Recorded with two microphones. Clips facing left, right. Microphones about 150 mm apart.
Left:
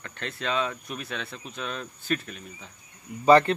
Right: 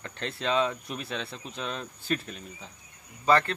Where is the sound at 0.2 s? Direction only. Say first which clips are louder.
Right 2 dB; 30° right (ahead or behind).